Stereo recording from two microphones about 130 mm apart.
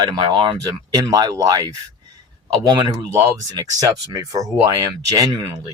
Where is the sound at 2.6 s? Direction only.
35° right (ahead or behind).